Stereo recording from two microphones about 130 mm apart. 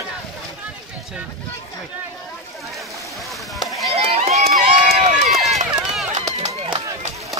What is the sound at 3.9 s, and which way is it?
Run, 55° right (ahead or behind).